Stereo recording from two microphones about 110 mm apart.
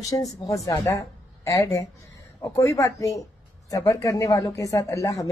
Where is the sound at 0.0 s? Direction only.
30° left (ahead or behind).